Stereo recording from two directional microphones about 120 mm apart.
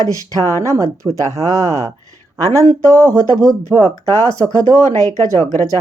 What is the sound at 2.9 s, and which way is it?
Speech, 30° right (ahead or behind).